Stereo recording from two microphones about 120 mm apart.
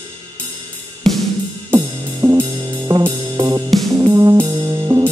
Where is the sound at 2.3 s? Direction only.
35° right (ahead or behind).